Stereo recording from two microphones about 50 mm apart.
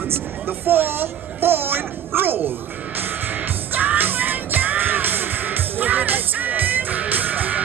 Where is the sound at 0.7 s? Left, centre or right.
Right.